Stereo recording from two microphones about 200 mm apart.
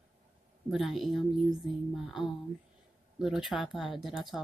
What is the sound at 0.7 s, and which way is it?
Speech, centre (ahead or behind).